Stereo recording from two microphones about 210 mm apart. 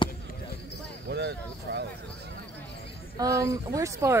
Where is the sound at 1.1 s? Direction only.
50° right (ahead or behind).